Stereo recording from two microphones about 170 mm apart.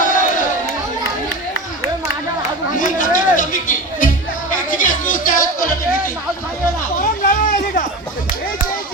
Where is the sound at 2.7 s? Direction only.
50° left (ahead or behind).